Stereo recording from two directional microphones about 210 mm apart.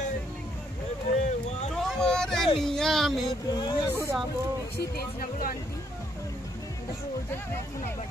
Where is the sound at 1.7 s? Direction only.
Centre (ahead or behind).